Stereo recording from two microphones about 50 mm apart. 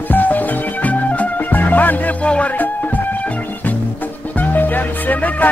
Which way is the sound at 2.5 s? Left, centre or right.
Left.